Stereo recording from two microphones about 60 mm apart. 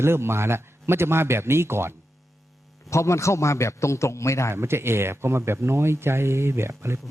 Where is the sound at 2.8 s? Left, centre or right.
Left.